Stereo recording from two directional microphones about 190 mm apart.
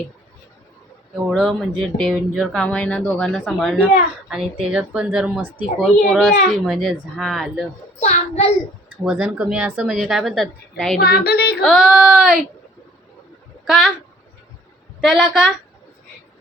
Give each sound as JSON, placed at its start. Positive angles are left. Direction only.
{"t": 1.1, "sound": "speech", "side_deg": 0}
{"t": 8.0, "sound": "a child's voice", "side_deg": 35}
{"t": 9.0, "sound": "speech", "side_deg": -5}
{"t": 11.0, "sound": "speech", "side_deg": 55}
{"t": 11.6, "sound": "speech", "side_deg": 0}
{"t": 13.7, "sound": "speech", "side_deg": 0}
{"t": 15.0, "sound": "speech", "side_deg": 0}